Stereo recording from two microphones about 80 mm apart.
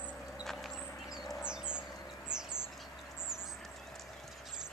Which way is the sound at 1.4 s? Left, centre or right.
Centre.